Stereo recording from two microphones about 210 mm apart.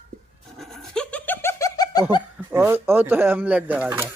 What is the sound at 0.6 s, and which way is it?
Laughter, centre (ahead or behind).